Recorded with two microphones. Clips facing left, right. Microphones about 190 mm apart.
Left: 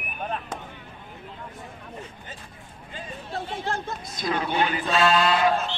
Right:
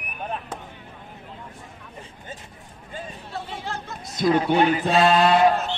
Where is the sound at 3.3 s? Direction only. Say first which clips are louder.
Left 3 dB; 50° left (ahead or behind).